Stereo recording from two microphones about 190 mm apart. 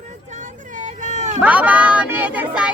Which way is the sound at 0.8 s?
40° right (ahead or behind).